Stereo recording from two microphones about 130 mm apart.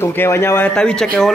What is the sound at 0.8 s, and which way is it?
Speech, 5° left (ahead or behind).